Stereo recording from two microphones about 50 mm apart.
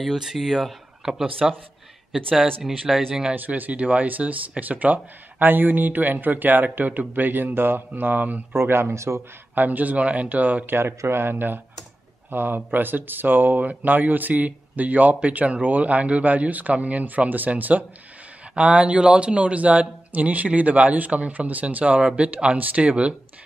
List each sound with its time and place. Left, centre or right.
0.0 s speech: centre
2.9 s speech: centre
3.3 s speech: right
8.5 s speech: right
8.9 s a man's voice: right
9.6 s speech: right
10.8 s speech: right